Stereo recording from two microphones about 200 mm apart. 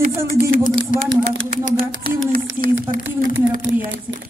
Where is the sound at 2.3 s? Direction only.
45° right (ahead or behind).